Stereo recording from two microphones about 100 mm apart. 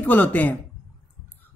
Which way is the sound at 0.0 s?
15° left (ahead or behind).